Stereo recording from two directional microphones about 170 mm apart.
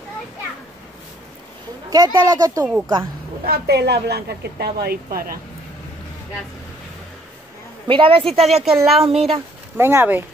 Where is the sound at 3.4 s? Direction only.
65° right (ahead or behind).